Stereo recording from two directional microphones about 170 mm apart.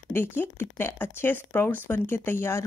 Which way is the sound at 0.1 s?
10° left (ahead or behind).